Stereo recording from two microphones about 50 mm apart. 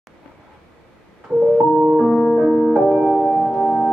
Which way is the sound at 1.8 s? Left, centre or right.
Centre.